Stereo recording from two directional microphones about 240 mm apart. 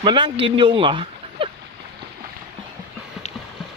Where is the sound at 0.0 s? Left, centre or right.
Centre.